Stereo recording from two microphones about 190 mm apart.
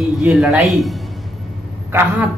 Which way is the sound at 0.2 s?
Centre (ahead or behind).